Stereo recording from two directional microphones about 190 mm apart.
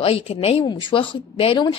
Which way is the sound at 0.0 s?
30° left (ahead or behind).